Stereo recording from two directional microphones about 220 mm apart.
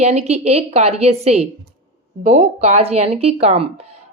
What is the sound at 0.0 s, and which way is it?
Speech, 30° right (ahead or behind).